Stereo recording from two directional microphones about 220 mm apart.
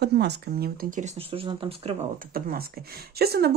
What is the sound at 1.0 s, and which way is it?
Speech, 25° right (ahead or behind).